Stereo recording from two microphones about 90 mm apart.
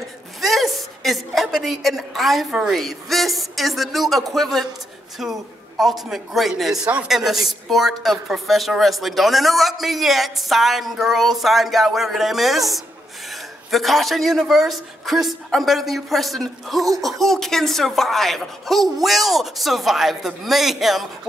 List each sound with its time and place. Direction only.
0.4 s a woman's voice: centre (ahead or behind)